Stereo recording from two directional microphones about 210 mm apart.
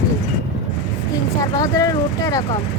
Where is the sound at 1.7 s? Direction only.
15° left (ahead or behind).